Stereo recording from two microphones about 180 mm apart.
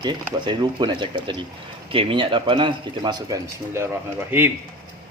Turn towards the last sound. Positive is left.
turn(degrees=-10)  # may be behind; listen again after turning